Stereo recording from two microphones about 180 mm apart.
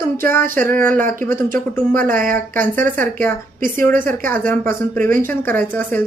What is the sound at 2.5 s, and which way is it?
Speech, 10° left (ahead or behind).